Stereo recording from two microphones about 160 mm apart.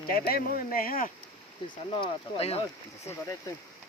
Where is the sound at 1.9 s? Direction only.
35° left (ahead or behind).